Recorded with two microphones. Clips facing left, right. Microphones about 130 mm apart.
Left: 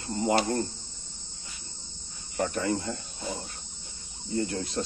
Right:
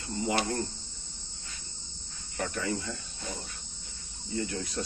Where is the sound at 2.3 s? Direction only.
35° left (ahead or behind).